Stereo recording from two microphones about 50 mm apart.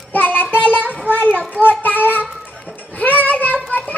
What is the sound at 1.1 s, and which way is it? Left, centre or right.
A child's voice, left.